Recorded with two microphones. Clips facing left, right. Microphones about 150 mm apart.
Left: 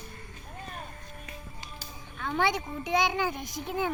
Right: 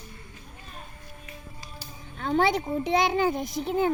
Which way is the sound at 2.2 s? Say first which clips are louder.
Right 6 dB; 35° right (ahead or behind).